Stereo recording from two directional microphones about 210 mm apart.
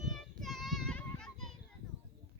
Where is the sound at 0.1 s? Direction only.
Centre (ahead or behind).